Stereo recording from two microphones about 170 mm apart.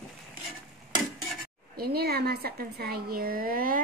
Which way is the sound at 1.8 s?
65° right (ahead or behind).